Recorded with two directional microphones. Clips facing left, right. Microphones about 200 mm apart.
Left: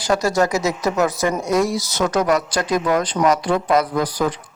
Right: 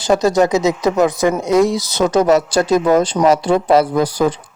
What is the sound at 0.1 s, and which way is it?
Speech, 20° right (ahead or behind).